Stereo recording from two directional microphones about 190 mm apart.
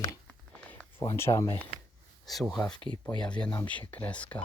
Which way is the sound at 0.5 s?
5° left (ahead or behind).